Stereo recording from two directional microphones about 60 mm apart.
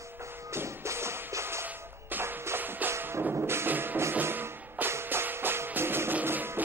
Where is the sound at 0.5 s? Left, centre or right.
Right.